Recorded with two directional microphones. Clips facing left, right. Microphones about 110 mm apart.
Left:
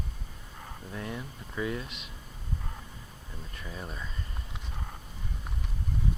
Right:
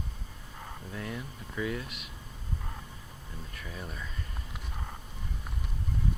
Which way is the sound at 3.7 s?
20° left (ahead or behind).